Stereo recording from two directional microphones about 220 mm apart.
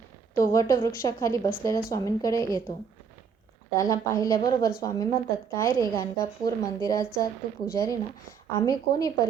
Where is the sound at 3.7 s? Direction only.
15° left (ahead or behind).